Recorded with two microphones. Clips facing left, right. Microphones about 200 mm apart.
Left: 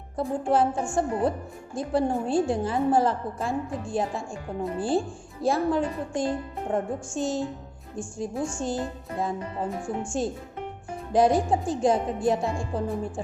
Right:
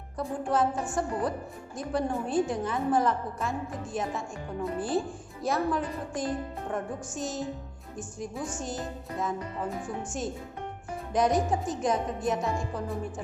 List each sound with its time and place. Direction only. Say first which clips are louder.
0.2 s a child's voice: left 4 dB; 30° left (ahead or behind)